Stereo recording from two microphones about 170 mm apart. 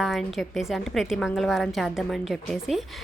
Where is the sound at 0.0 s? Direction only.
Centre (ahead or behind).